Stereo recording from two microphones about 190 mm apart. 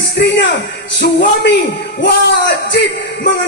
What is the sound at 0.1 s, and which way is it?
Music, 65° left (ahead or behind).